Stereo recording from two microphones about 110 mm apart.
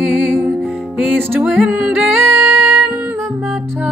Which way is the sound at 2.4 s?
Centre (ahead or behind).